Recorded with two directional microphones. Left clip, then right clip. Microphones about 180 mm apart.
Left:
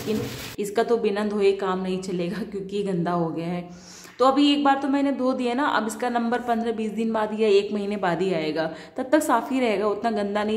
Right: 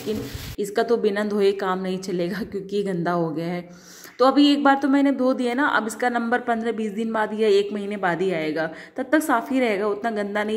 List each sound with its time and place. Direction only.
0.6 s a woman's voice: 15° right (ahead or behind)